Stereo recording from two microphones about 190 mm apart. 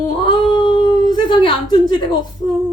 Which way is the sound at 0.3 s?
25° left (ahead or behind).